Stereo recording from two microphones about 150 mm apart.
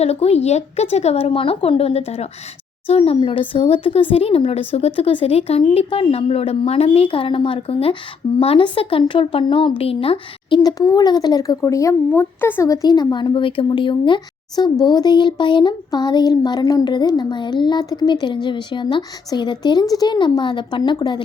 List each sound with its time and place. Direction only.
0.0 s speech: 45° left (ahead or behind)
10.6 s speech: 25° left (ahead or behind)